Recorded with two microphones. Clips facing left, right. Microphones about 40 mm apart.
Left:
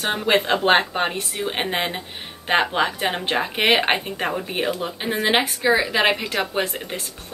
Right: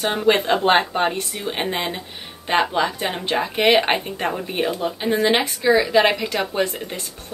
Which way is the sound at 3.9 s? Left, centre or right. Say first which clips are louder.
Right 1 dB; centre.